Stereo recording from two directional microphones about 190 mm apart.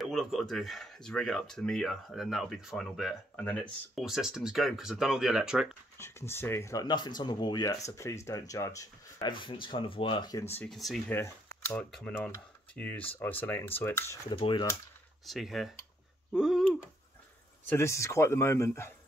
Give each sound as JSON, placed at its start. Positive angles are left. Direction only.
{"t": 0.0, "sound": "speech", "side_deg": 0}
{"t": 5.9, "sound": "speech", "side_deg": 15}
{"t": 10.7, "sound": "speech", "side_deg": 0}
{"t": 11.1, "sound": "speech", "side_deg": 10}
{"t": 14.3, "sound": "speech", "side_deg": 25}
{"t": 15.2, "sound": "speech", "side_deg": 0}
{"t": 17.6, "sound": "speech", "side_deg": 15}